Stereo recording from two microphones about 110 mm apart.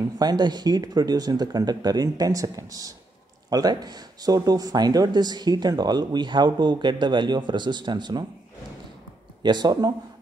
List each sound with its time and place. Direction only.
0.2 s speech: 40° right (ahead or behind)
9.4 s speech: 40° right (ahead or behind)